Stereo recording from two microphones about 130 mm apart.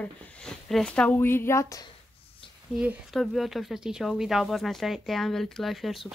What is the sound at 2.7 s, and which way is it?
Speech, 10° right (ahead or behind).